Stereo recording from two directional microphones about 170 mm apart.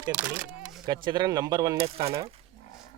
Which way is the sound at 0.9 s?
25° right (ahead or behind).